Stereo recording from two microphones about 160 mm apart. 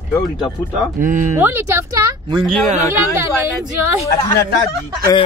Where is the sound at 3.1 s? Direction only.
15° right (ahead or behind).